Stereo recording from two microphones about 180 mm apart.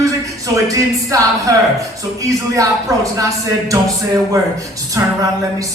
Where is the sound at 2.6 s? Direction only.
20° right (ahead or behind).